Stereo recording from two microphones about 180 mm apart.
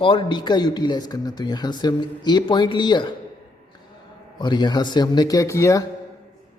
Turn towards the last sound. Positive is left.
turn(degrees=15)  # may be behind; listen again after turning